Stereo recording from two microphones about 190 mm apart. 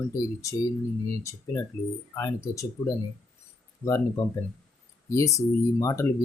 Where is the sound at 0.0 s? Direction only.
15° left (ahead or behind).